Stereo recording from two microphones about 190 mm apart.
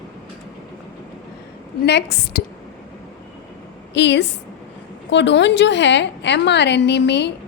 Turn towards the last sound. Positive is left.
turn(degrees=65)  # may be behind; listen again after turning